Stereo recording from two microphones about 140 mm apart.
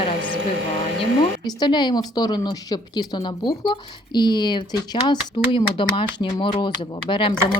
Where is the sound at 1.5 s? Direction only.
30° left (ahead or behind).